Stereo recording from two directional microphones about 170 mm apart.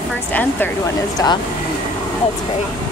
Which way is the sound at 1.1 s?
25° left (ahead or behind).